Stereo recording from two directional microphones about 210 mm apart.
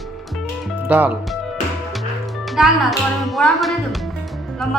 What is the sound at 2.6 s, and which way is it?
A woman's voice, 5° right (ahead or behind).